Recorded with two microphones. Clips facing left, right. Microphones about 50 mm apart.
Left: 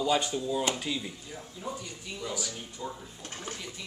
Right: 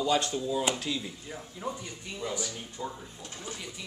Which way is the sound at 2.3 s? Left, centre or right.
Right.